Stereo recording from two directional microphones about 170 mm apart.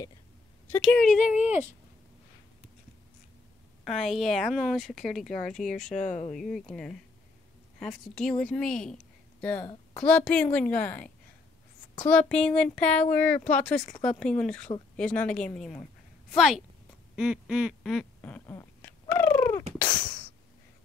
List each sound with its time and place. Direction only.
0.7 s speech: 5° left (ahead or behind)
3.8 s speech: centre (ahead or behind)
6.0 s speech: 45° left (ahead or behind)
6.3 s a woman's voice: centre (ahead or behind)
12.1 s a woman's voice: 5° left (ahead or behind)
17.1 s quack: 5° right (ahead or behind); by 19.6 s 10° left (ahead or behind)